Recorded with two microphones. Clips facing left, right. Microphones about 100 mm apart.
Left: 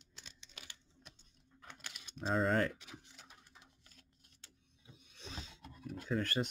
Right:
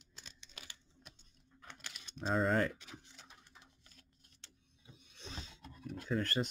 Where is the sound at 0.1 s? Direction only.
40° right (ahead or behind).